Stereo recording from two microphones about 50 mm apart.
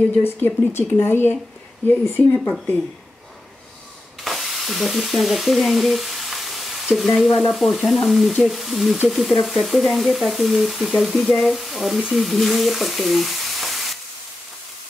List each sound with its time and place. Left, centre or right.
0.2 s speech: left
1.9 s speech: left
4.2 s sizzle: centre
7.1 s speech: centre
12.1 s sizzle: centre